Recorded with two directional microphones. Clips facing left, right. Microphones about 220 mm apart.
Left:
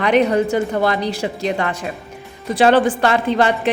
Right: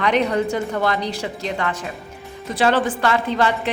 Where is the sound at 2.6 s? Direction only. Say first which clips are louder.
Left 5 dB; 15° left (ahead or behind).